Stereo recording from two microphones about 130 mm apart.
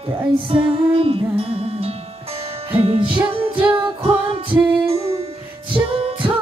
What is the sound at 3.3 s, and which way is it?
Singing, 45° right (ahead or behind).